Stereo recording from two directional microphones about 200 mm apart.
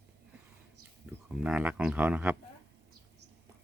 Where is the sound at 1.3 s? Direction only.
5° right (ahead or behind).